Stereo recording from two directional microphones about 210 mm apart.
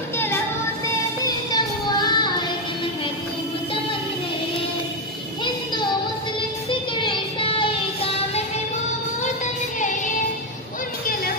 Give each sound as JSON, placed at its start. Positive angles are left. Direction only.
{"t": 1.2, "sound": "child singing", "side_deg": 20}
{"t": 6.7, "sound": "music", "side_deg": 25}